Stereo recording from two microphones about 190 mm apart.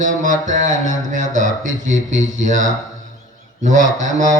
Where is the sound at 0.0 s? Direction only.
40° right (ahead or behind).